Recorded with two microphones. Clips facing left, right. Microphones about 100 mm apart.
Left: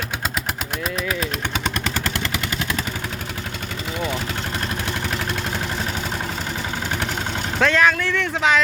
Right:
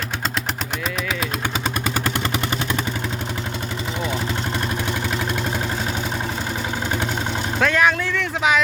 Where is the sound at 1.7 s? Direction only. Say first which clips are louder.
Right 2 dB; 10° right (ahead or behind).